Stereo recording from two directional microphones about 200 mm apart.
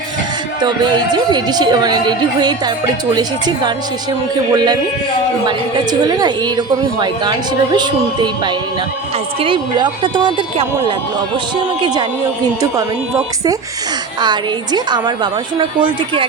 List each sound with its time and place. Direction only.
0.6 s a woman's voice: 20° right (ahead or behind)
14.2 s a woman's voice: 20° right (ahead or behind)